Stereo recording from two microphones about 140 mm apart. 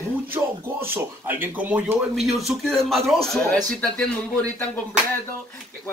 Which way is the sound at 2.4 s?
Centre (ahead or behind).